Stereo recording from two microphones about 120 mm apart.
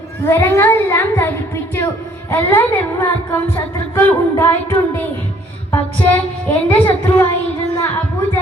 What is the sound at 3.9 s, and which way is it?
Speech, 20° left (ahead or behind).